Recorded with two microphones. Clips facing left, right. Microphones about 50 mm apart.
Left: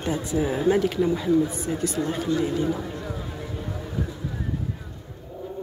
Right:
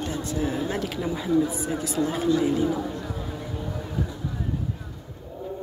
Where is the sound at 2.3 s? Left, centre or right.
Centre.